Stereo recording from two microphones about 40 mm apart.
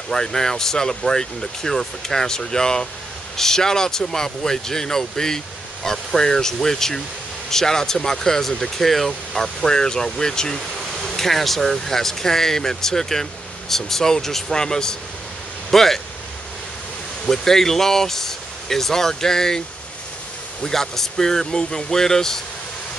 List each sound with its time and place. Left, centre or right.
0.1 s speech: centre
9.7 s speech: centre
10.8 s speech: centre
17.3 s speech: centre
20.6 s speech: centre